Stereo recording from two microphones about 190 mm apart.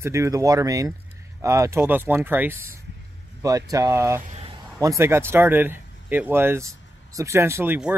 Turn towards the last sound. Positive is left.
turn(degrees=-10)  # may be behind; listen again after turning